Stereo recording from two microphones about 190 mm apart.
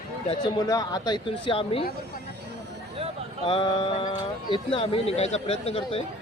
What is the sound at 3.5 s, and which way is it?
Speech, 25° left (ahead or behind).